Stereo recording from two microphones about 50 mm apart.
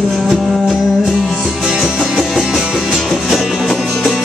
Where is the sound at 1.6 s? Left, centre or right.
Centre.